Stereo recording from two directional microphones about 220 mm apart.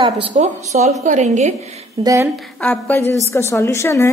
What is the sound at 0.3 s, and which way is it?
A woman's voice, 30° right (ahead or behind).